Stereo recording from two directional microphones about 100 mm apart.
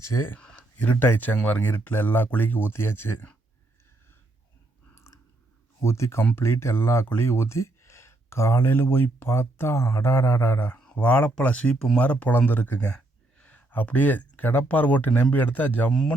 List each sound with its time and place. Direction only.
0.0 s speech: 25° left (ahead or behind)
0.3 s speech: 15° left (ahead or behind)
4.9 s chewing: 30° left (ahead or behind)
5.8 s speech: 25° left (ahead or behind)